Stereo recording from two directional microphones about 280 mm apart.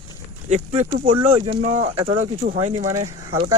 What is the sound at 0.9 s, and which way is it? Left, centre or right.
Speech, centre.